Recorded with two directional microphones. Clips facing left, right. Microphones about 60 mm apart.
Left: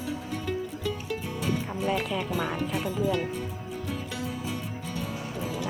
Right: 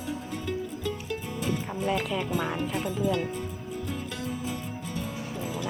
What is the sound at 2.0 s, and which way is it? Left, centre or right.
Speech, centre.